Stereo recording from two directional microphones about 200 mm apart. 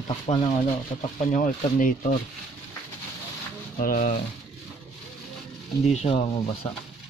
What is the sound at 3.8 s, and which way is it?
Speech, 45° left (ahead or behind).